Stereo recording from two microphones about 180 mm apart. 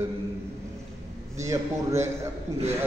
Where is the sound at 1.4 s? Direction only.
15° right (ahead or behind).